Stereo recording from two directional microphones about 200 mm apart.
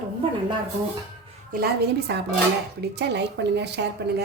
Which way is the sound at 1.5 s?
50° right (ahead or behind).